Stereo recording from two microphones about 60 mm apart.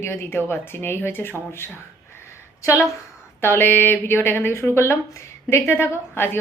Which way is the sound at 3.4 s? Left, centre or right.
Left.